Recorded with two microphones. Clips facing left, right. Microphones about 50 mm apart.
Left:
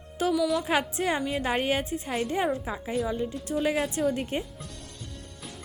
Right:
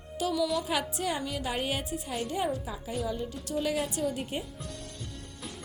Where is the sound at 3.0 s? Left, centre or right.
Left.